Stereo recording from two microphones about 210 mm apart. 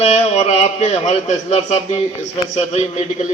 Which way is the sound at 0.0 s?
30° left (ahead or behind).